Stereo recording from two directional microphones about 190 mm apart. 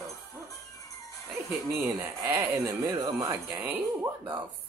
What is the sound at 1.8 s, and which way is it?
Speech, 15° right (ahead or behind).